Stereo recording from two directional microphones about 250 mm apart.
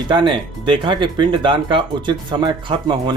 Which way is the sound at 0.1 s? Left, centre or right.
Centre.